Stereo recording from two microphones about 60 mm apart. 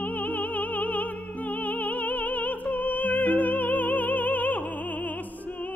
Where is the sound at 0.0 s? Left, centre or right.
Left.